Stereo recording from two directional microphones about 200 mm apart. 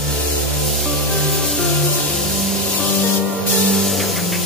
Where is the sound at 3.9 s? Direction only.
Centre (ahead or behind).